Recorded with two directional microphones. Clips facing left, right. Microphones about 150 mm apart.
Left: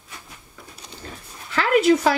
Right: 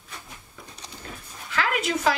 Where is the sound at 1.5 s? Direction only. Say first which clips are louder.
Left 9 dB; 35° left (ahead or behind).